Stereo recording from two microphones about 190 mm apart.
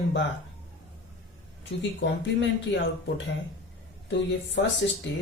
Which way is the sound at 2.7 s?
75° left (ahead or behind).